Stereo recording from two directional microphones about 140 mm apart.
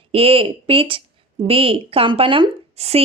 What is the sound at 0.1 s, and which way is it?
A woman's voice, 40° right (ahead or behind).